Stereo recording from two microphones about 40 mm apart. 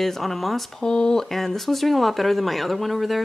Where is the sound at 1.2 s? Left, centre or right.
Centre.